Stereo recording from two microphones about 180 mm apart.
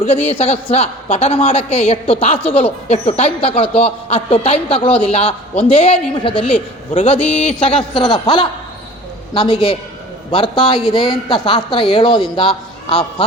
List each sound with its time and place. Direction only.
0.0 s a woman's voice: 30° left (ahead or behind)